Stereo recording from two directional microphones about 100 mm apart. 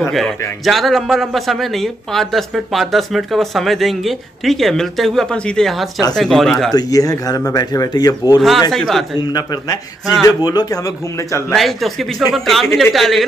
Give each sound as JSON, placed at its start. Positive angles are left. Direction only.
{"t": 0.7, "sound": "a man's voice", "side_deg": 0}
{"t": 6.7, "sound": "speech", "side_deg": 40}
{"t": 8.4, "sound": "a man's voice", "side_deg": 0}
{"t": 9.2, "sound": "speech", "side_deg": 40}
{"t": 11.5, "sound": "a man's voice", "side_deg": 0}